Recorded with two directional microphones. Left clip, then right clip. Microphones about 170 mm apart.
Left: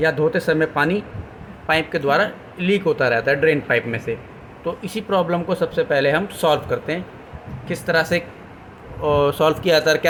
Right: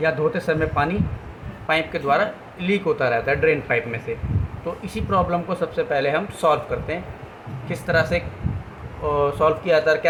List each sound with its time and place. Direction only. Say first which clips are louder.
0.3 s speech: left 3 dB; 25° left (ahead or behind)